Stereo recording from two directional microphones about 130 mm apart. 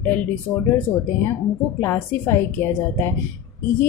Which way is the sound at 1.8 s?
20° left (ahead or behind).